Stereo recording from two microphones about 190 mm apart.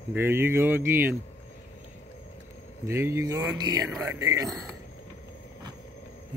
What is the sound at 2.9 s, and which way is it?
Speech, 15° right (ahead or behind).